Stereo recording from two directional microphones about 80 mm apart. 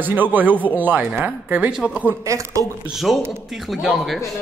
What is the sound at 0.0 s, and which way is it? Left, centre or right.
Speech, right.